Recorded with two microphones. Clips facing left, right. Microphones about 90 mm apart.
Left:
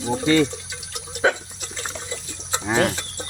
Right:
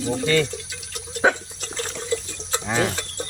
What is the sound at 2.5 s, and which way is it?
Chicken, 15° left (ahead or behind).